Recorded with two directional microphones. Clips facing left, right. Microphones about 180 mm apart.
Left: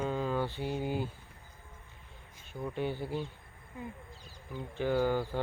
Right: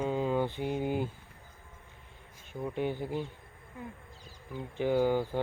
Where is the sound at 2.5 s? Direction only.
15° right (ahead or behind).